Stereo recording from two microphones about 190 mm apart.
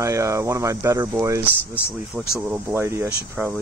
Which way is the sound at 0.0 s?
15° right (ahead or behind).